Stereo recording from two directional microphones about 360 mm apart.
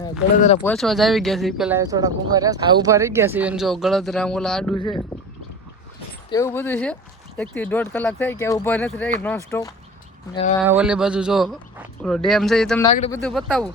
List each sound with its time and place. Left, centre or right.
0.3 s speech: centre
0.6 s speech: centre
6.3 s speech: centre
10.6 s speech: centre
12.9 s speech: centre